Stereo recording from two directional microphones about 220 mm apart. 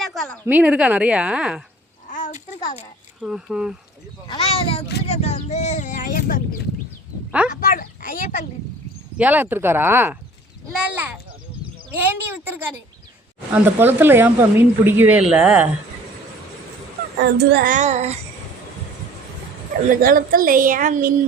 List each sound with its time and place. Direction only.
0.0 s a woman's voice: centre (ahead or behind)
2.1 s a sound: 35° left (ahead or behind)
3.2 s a woman's voice: 5° right (ahead or behind)
4.3 s speech: 25° left (ahead or behind)
7.3 s speech: 5° right (ahead or behind)
7.5 s speech: 40° left (ahead or behind)
9.1 s a woman's voice: 5° right (ahead or behind)
17.3 s a woman's voice: 40° right (ahead or behind)
19.9 s a woman's voice: 40° right (ahead or behind)